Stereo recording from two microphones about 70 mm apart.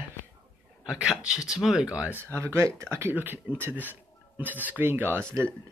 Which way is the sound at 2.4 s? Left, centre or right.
Right.